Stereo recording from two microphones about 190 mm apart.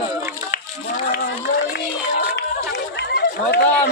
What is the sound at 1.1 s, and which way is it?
Speech, 55° left (ahead or behind).